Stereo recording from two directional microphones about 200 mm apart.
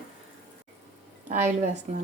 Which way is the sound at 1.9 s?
35° right (ahead or behind).